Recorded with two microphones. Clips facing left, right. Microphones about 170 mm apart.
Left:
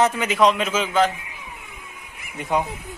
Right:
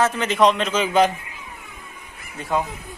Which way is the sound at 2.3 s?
20° left (ahead or behind).